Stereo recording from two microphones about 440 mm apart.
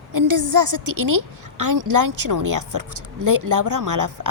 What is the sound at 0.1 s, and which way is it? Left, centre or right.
A woman's voice, right.